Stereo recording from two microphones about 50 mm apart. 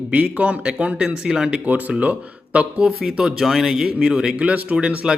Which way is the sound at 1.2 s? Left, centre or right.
Centre.